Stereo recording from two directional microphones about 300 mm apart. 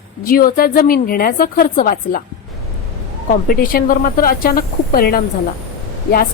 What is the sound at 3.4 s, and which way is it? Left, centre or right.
A woman's voice, left.